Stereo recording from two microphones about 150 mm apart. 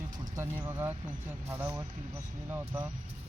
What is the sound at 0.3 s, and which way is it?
Speech, 15° right (ahead or behind).